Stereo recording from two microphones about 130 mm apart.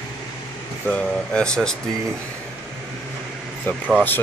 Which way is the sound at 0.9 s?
5° left (ahead or behind).